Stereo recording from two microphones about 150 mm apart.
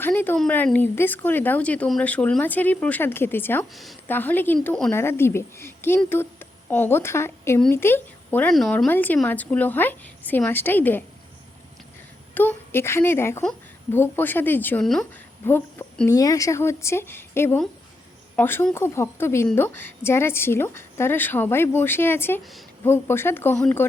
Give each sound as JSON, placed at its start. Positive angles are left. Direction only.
{"t": 0.0, "sound": "a woman's voice", "side_deg": 15}
{"t": 8.5, "sound": "speech", "side_deg": 0}
{"t": 12.3, "sound": "speech", "side_deg": 10}